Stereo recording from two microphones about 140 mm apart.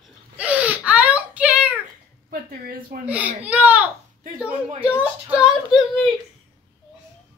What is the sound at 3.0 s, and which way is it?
Baby cry, 10° right (ahead or behind).